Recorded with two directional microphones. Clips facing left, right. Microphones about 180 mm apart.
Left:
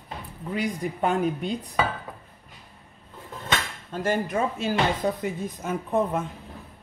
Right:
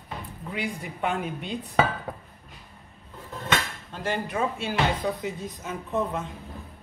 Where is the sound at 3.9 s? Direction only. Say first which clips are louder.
Left 4 dB; 45° left (ahead or behind).